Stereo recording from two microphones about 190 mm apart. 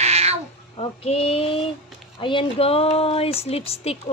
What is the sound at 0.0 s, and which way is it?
Cat, 35° right (ahead or behind).